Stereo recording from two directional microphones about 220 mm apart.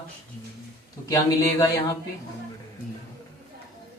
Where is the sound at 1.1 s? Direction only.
15° left (ahead or behind).